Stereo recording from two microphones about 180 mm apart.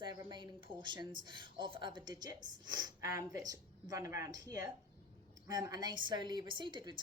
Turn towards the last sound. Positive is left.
turn(degrees=-25)  # may be behind; listen again after turning